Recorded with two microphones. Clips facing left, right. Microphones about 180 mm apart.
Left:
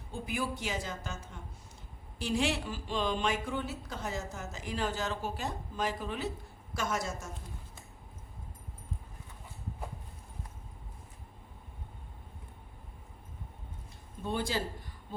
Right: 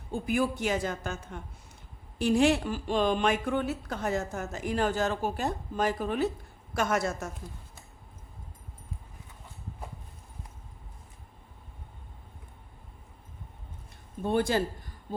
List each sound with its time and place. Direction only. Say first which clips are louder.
0.1 s a woman's voice: right 7 dB; 50° right (ahead or behind)
6.7 s a woman's voice: right 6 dB; 65° right (ahead or behind)
14.2 s speech: right 7 dB; 55° right (ahead or behind)